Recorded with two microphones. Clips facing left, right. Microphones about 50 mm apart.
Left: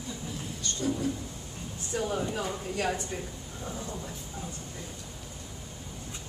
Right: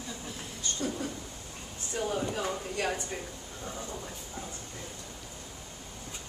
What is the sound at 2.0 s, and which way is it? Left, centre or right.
Speech, centre.